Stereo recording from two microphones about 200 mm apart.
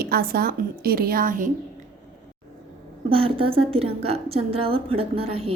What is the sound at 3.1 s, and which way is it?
A woman's voice, 25° right (ahead or behind).